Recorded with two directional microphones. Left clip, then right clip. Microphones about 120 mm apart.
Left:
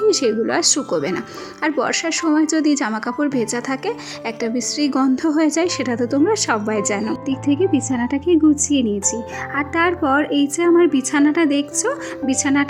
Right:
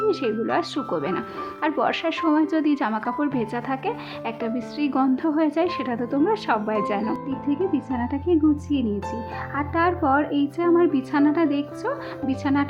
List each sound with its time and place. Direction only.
0.1 s a woman's voice: 30° left (ahead or behind)
7.6 s a woman's voice: 40° left (ahead or behind)